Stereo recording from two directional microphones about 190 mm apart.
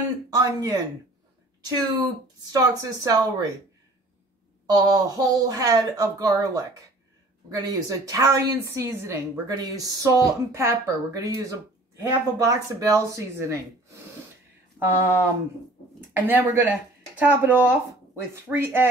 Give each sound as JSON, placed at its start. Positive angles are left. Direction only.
{"t": 0.3, "sound": "speech", "side_deg": -20}
{"t": 4.6, "sound": "a woman's voice", "side_deg": -20}
{"t": 14.8, "sound": "a woman's voice", "side_deg": -10}